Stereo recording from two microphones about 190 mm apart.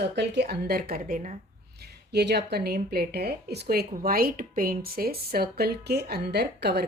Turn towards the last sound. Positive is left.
turn(degrees=-60)  # may be behind; listen again after turning